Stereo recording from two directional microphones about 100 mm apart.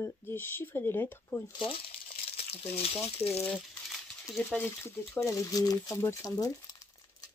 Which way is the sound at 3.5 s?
Centre (ahead or behind).